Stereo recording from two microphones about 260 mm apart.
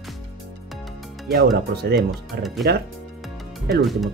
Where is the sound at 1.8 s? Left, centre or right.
Right.